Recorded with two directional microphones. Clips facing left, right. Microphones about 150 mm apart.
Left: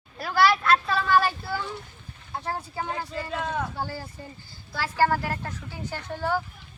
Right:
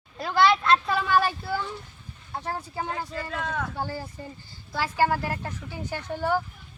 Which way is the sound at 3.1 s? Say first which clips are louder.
Left 1 dB; 15° left (ahead or behind).